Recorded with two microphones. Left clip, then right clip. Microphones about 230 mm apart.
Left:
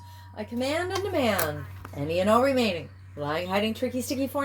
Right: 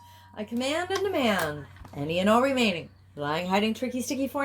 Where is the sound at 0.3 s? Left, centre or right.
Right.